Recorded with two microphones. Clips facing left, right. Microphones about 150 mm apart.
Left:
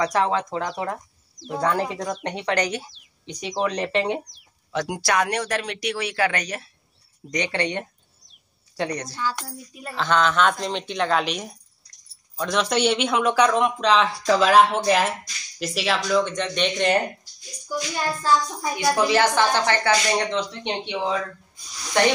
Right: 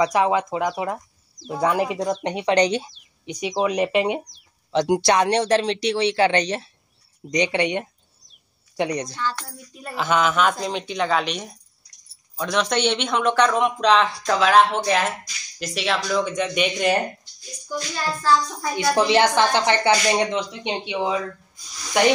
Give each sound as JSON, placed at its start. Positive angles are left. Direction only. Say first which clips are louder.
{"t": 0.0, "sound": "speech", "louder": "right 3 dB", "side_deg": -15}
{"t": 4.3, "sound": "speech", "louder": "right 5 dB", "side_deg": -25}
{"t": 9.1, "sound": "speech", "louder": "even", "side_deg": 10}
{"t": 9.8, "sound": "speech", "louder": "right 1 dB", "side_deg": -10}
{"t": 17.6, "sound": "speech", "louder": "left 1 dB", "side_deg": 15}
{"t": 18.9, "sound": "speech", "louder": "right 3 dB", "side_deg": -25}